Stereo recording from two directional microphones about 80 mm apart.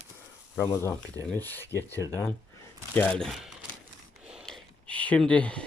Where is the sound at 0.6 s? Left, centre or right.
Left.